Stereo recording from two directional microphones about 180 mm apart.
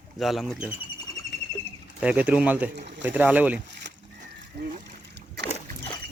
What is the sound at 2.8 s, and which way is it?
Speech, 75° right (ahead or behind).